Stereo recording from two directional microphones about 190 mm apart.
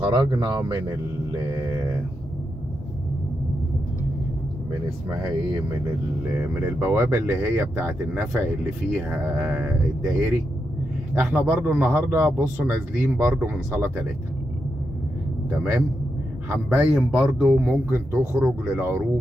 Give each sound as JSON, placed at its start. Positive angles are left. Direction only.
{"t": 0.0, "sound": "speech", "side_deg": -25}
{"t": 6.6, "sound": "a man's voice", "side_deg": -15}
{"t": 16.6, "sound": "a man's voice", "side_deg": -5}